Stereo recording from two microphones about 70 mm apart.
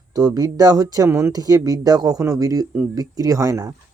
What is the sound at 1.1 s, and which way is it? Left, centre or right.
Speech, right.